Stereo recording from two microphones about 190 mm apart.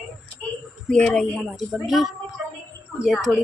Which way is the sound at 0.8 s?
5° left (ahead or behind).